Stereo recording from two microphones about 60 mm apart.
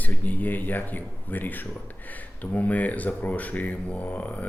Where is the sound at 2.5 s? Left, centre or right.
Left.